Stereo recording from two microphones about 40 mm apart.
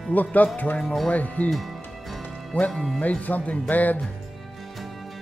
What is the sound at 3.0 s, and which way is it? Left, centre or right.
Speech, left.